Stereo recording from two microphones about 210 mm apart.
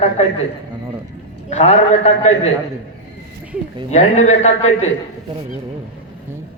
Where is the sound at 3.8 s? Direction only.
35° left (ahead or behind).